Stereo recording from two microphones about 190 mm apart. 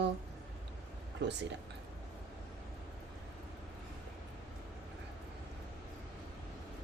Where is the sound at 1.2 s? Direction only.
65° right (ahead or behind).